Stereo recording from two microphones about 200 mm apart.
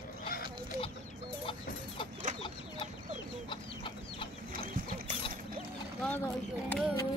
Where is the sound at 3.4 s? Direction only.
25° left (ahead or behind).